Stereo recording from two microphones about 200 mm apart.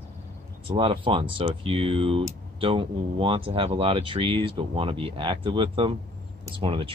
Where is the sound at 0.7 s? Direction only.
25° right (ahead or behind).